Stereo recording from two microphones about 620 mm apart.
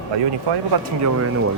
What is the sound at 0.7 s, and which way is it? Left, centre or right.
Speech, right.